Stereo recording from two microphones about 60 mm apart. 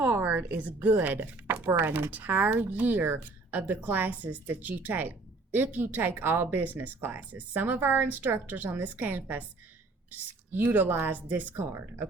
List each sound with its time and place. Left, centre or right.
0.0 s a sound: right
0.5 s speech: right
11.5 s speech: right